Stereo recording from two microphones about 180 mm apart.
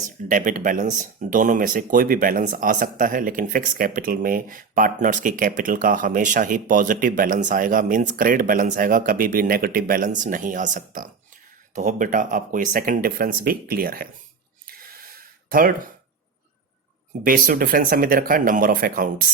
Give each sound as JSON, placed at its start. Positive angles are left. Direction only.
{"t": 0.3, "sound": "speech", "side_deg": -45}
{"t": 14.7, "sound": "a sound", "side_deg": -55}
{"t": 17.2, "sound": "speech", "side_deg": -50}